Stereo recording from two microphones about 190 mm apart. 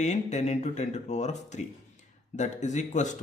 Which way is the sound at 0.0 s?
35° left (ahead or behind).